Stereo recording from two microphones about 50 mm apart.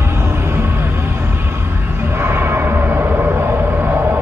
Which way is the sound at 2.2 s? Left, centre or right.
Right.